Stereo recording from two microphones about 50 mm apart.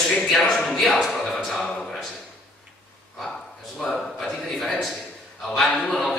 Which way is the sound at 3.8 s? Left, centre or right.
Centre.